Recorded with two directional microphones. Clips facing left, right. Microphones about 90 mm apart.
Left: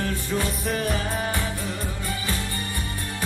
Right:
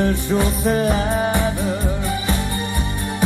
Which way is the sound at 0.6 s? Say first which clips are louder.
Right 8 dB; 30° right (ahead or behind).